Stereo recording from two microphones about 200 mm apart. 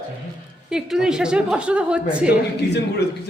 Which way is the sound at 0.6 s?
5° right (ahead or behind).